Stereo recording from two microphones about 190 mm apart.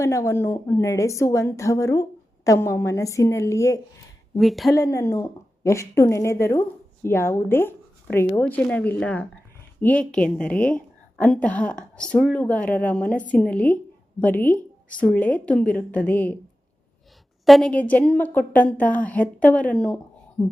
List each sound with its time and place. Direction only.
0.0 s a woman's voice: 15° left (ahead or behind)
4.4 s speech: centre (ahead or behind)
4.7 s a woman's voice: 20° left (ahead or behind)
17.4 s a woman's voice: centre (ahead or behind)